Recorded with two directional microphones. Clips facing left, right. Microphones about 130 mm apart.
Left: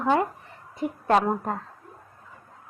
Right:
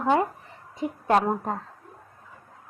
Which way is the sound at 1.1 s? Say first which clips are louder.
Even; centre (ahead or behind).